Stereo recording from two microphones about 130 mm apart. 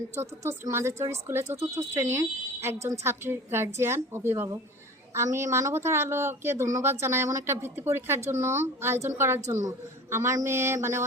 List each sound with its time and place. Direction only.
0.2 s speech: 20° right (ahead or behind)